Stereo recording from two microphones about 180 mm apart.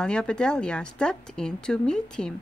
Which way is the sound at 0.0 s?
5° left (ahead or behind).